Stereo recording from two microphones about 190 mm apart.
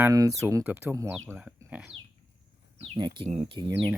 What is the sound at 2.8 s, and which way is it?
Speech, 30° right (ahead or behind).